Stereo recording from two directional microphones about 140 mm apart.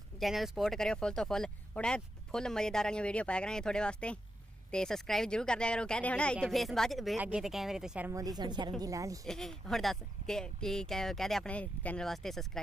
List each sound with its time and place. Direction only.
0.2 s speech: centre (ahead or behind)
8.1 s a woman's voice: 25° right (ahead or behind)
9.2 s speech: 5° left (ahead or behind)